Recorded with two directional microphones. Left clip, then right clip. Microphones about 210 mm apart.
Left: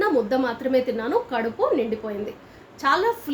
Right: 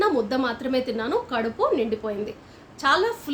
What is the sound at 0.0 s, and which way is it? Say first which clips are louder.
A woman's voice: left 1 dB; 20° right (ahead or behind).